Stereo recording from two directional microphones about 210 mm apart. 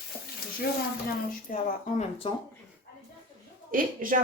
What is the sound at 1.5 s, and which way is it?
Speech, 35° left (ahead or behind).